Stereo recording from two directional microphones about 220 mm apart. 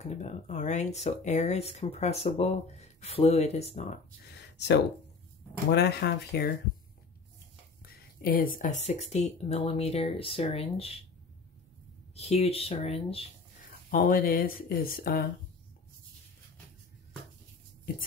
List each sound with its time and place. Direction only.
0.0 s speech: 30° left (ahead or behind)
4.3 s a sound: 50° left (ahead or behind)
5.7 s speech: 50° left (ahead or behind)
7.8 s speech: 40° left (ahead or behind)
12.2 s speech: 30° left (ahead or behind)
13.8 s speech: 40° left (ahead or behind)